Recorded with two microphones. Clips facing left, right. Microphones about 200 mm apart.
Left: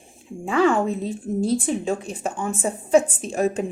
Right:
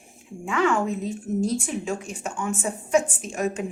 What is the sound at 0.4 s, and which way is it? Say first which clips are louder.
A woman's voice: left 4 dB; 35° left (ahead or behind).